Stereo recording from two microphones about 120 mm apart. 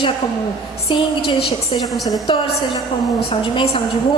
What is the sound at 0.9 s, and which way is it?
Speech, 40° left (ahead or behind).